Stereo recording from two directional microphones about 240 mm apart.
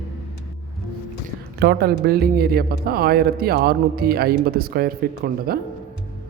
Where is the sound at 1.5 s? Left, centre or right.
Right.